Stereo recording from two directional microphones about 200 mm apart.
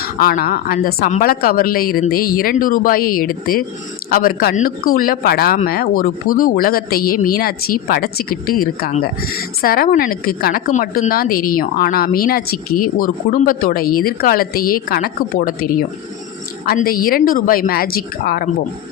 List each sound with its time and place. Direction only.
0.0 s speech: 50° left (ahead or behind)